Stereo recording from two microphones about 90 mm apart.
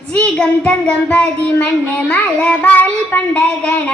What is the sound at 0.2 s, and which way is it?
Child singing, 15° left (ahead or behind).